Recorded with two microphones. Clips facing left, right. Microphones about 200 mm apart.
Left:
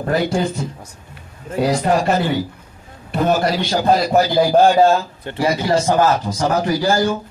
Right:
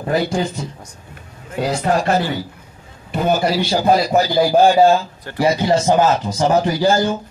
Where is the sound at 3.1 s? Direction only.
5° right (ahead or behind).